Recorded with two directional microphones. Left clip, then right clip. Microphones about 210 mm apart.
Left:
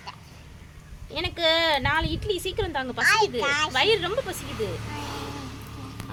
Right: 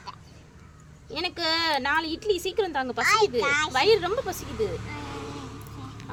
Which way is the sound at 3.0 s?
10° right (ahead or behind).